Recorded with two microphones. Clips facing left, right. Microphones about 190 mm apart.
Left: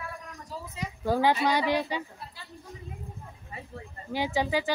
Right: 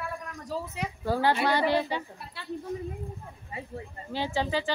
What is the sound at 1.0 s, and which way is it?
Speech, 15° left (ahead or behind).